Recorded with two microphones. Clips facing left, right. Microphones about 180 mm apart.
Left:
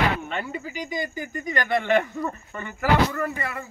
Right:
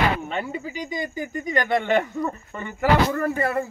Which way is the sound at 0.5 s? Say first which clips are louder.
Right 1 dB; 25° right (ahead or behind).